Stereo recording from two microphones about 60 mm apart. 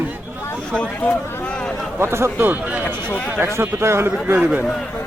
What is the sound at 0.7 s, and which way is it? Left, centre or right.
Speech, centre.